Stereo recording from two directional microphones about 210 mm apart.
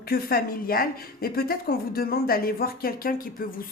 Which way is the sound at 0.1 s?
45° left (ahead or behind).